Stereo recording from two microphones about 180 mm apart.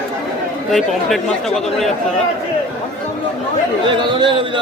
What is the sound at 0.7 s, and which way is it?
Speech, centre (ahead or behind).